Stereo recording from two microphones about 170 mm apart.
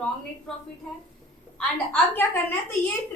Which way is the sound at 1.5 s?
5° left (ahead or behind).